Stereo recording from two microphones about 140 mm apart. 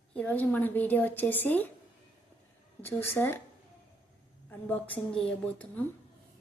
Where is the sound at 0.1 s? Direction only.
10° left (ahead or behind).